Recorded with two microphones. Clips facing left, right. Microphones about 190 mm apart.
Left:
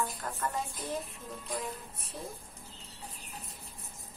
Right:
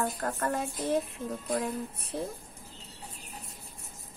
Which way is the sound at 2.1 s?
70° right (ahead or behind).